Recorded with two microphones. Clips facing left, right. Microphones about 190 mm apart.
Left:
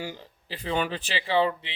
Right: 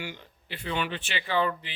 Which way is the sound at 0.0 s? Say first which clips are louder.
Left 3 dB; 35° left (ahead or behind).